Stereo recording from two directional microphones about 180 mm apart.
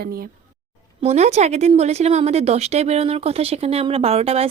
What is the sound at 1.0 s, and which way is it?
Speech, 40° right (ahead or behind).